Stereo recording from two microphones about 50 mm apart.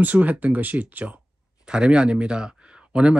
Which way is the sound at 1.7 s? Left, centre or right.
Centre.